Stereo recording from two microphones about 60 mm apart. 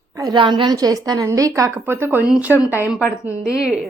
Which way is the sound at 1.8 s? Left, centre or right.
Right.